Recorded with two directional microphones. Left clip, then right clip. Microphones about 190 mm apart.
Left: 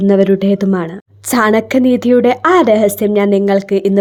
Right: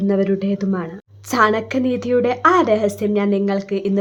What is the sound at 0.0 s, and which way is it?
A woman's voice, 35° left (ahead or behind).